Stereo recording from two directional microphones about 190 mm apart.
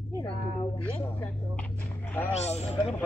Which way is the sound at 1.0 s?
10° left (ahead or behind).